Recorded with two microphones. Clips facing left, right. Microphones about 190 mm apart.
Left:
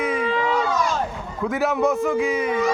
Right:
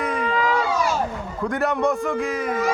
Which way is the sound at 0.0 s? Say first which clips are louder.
Left 1 dB; centre (ahead or behind).